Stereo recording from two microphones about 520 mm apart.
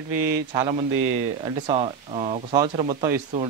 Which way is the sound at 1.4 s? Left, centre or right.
Centre.